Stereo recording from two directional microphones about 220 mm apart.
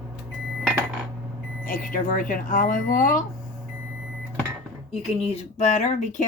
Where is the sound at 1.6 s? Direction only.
40° left (ahead or behind).